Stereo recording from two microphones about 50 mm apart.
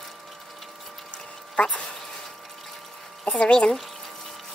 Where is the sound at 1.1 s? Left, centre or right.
Left.